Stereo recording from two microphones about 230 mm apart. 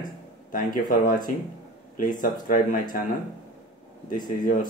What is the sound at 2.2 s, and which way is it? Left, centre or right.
Speech, left.